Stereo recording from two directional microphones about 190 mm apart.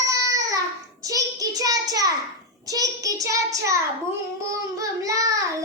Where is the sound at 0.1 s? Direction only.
15° right (ahead or behind).